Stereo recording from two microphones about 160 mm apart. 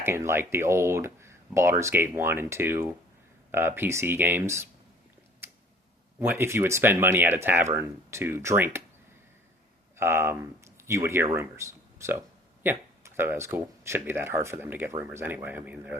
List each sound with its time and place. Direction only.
0.0 s speech: 15° right (ahead or behind)
5.4 s a sound: 15° right (ahead or behind)
6.1 s speech: 15° right (ahead or behind)
10.0 s speech: 15° right (ahead or behind)